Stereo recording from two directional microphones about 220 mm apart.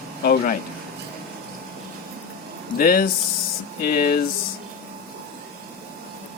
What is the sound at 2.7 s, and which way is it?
Speech, 40° left (ahead or behind).